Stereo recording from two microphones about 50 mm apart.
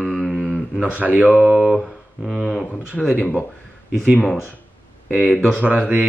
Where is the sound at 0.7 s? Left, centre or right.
Right.